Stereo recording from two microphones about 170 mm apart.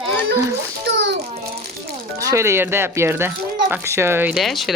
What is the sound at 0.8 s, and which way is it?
Speech, 90° right.